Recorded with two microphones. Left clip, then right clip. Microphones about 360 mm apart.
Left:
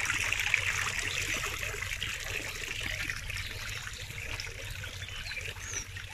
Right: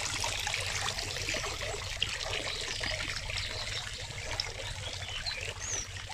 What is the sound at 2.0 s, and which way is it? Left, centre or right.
Water, right.